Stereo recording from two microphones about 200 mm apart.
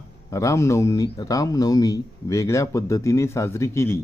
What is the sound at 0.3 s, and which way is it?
Speech, 15° left (ahead or behind).